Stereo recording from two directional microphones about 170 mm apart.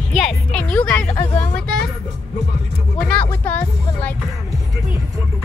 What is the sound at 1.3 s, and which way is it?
Vehicle, 5° left (ahead or behind).